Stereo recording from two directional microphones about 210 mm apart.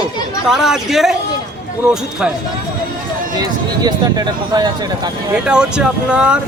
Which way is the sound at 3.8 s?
20° right (ahead or behind).